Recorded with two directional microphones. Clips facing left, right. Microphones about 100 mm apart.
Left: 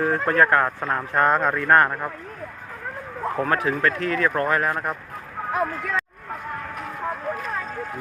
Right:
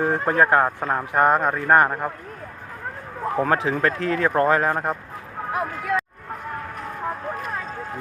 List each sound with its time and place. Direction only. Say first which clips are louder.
0.0 s speech: even; 20° right (ahead or behind)
3.3 s speech: right 2 dB; 25° right (ahead or behind)
5.5 s speech: right 1 dB; 5° right (ahead or behind)